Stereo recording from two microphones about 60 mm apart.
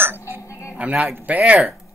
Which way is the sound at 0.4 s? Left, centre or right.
Left.